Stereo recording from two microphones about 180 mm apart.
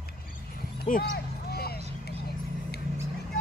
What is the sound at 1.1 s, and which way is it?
Vehicle, 60° left (ahead or behind).